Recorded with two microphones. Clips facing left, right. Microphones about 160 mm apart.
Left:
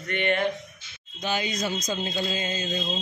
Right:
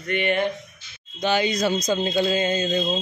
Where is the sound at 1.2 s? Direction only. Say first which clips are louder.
Right 7 dB; 75° right (ahead or behind).